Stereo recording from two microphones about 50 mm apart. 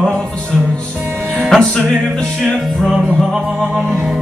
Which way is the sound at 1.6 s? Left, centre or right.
Centre.